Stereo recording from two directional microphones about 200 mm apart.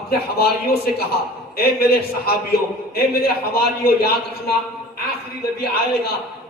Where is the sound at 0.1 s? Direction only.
50° left (ahead or behind).